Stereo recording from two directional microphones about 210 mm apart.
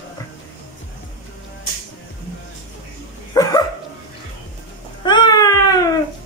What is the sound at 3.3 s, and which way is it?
Dog, 20° left (ahead or behind).